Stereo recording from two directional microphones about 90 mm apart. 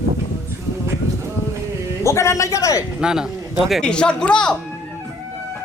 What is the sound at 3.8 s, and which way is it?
Speech, 10° left (ahead or behind).